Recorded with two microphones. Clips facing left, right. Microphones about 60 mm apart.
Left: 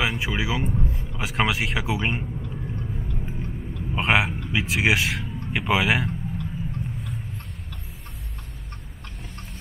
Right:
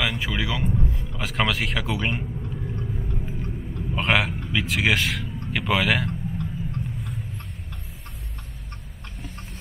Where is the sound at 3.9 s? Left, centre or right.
Centre.